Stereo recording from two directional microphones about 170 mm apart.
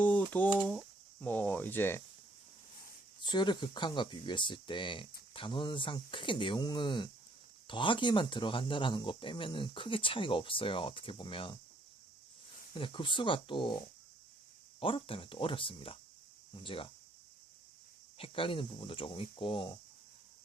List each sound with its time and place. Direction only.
0.0 s speech: 10° left (ahead or behind)
3.2 s speech: 25° left (ahead or behind)
12.7 s speech: 30° left (ahead or behind)
18.2 s speech: 30° left (ahead or behind)